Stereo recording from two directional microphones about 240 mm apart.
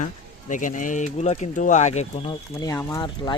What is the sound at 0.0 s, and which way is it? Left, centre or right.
Speech, left.